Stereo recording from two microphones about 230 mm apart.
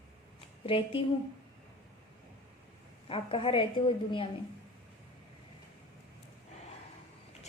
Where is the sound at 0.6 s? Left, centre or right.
Left.